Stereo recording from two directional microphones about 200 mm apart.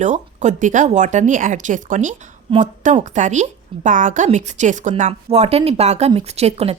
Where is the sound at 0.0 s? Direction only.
35° right (ahead or behind).